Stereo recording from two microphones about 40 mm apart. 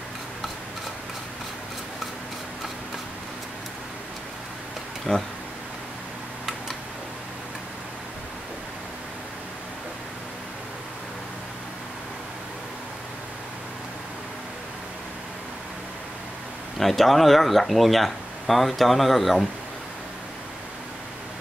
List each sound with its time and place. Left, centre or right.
5.1 s speech: centre
16.7 s speech: centre